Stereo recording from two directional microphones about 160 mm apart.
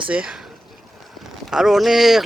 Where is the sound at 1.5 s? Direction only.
5° right (ahead or behind).